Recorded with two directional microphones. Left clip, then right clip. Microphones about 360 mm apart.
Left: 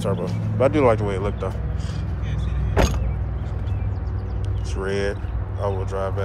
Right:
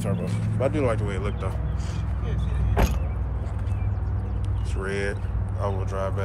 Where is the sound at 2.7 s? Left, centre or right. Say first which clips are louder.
Left 5 dB; left.